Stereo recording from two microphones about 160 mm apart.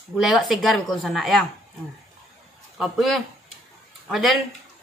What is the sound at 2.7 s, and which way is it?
Speech, centre (ahead or behind).